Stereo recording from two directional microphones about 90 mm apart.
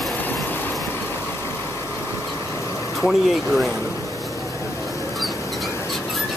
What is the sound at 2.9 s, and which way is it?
Speech, centre (ahead or behind).